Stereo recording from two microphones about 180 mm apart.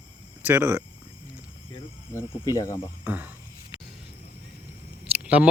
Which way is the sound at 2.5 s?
20° left (ahead or behind).